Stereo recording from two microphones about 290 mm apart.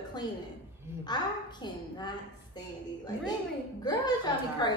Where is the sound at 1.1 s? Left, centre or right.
Centre.